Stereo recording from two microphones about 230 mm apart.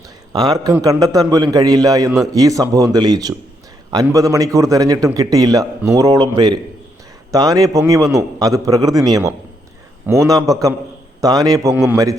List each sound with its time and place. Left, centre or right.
0.3 s a man's voice: centre